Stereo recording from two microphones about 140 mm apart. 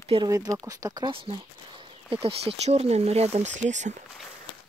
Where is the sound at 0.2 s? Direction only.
25° right (ahead or behind).